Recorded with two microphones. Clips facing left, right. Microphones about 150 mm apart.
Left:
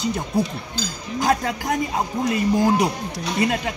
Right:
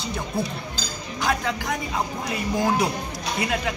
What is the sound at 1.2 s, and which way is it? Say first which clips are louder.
Speech: left 4 dB; 40° left (ahead or behind).